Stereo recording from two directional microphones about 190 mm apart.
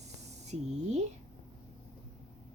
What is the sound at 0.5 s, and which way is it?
Speech, 35° right (ahead or behind).